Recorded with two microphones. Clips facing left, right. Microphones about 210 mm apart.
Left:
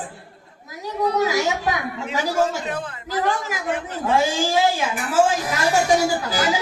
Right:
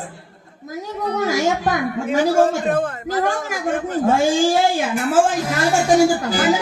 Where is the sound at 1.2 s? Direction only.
45° right (ahead or behind).